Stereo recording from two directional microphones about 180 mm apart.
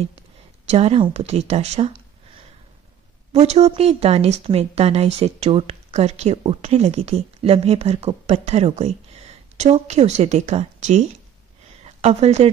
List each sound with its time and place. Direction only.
0.7 s speech: 35° right (ahead or behind)